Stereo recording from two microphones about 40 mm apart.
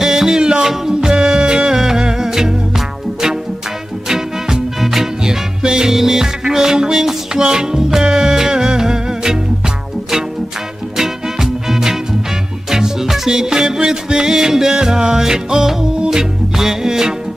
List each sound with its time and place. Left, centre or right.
0.0 s music: centre
4.1 s swing music: centre
5.2 s music: centre
11.0 s swing music: centre
12.7 s music: centre